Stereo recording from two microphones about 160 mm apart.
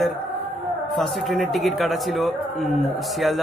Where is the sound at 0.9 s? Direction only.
Centre (ahead or behind).